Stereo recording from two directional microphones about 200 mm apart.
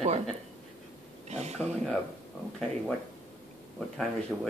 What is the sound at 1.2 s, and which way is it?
Speech, 35° right (ahead or behind).